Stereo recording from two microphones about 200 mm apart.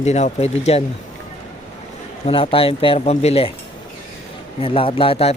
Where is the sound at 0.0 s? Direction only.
35° left (ahead or behind).